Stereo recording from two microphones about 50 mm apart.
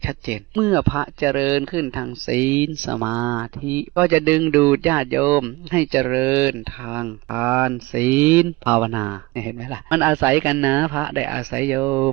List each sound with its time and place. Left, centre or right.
0.0 s speech: right